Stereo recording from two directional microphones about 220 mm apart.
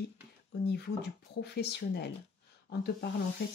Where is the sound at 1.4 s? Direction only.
50° left (ahead or behind).